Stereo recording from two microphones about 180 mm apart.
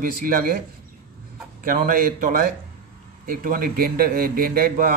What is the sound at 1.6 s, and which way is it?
A man's voice, 50° right (ahead or behind).